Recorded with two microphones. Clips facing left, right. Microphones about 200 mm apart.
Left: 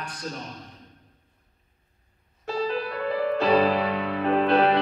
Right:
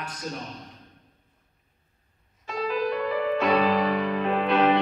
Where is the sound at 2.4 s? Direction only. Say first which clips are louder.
Even; 35° left (ahead or behind).